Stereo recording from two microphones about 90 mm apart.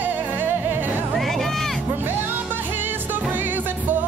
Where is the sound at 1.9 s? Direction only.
20° right (ahead or behind).